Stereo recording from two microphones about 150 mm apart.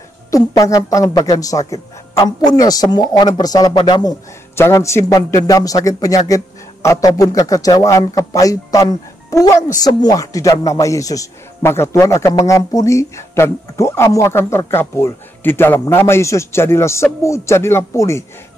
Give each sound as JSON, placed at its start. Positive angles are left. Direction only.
{"t": 0.3, "sound": "speech", "side_deg": 20}